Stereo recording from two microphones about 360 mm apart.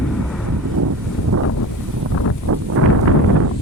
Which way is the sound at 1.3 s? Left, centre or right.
Right.